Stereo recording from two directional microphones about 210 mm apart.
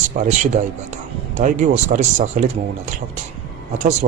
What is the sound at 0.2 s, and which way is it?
Speech, 40° right (ahead or behind).